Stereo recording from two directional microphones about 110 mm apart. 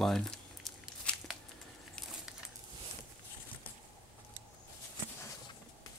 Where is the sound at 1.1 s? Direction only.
10° left (ahead or behind).